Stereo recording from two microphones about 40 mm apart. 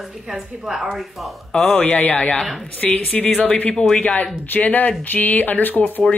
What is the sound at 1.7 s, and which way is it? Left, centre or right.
Speech, left.